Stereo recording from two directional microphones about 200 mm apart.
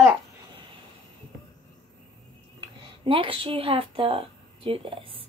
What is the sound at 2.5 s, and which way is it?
Speech, 25° right (ahead or behind).